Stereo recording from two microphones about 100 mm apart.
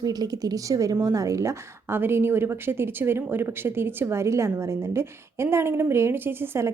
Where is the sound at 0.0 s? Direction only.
40° right (ahead or behind).